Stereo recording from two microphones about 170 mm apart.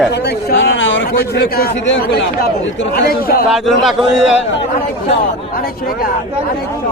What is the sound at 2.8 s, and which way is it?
Speech, 60° left (ahead or behind).